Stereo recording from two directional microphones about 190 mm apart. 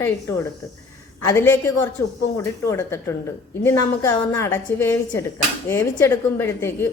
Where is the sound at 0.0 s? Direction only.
15° left (ahead or behind).